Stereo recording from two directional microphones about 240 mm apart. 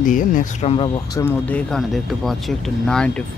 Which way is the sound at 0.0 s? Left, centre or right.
Left.